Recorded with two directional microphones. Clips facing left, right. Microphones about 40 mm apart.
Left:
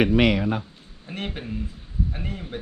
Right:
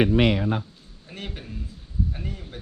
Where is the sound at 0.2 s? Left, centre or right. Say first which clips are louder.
Left 1 dB; left.